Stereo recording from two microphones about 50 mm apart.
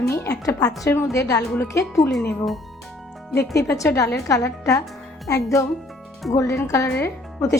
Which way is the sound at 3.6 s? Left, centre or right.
Left.